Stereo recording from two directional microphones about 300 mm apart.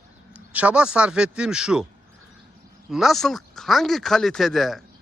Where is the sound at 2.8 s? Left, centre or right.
Centre.